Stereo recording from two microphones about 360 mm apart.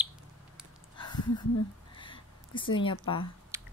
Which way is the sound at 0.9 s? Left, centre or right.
Centre.